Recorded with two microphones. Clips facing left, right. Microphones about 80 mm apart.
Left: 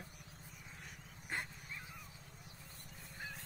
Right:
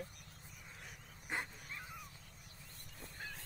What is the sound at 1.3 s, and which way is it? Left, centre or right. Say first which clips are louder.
Dog: right 1 dB; centre.